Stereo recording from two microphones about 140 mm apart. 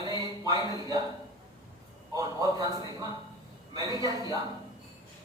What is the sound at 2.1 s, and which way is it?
Speech, 25° right (ahead or behind).